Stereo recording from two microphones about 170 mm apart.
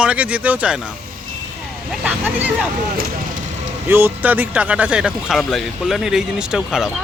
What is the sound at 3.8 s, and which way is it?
Speech, 15° right (ahead or behind).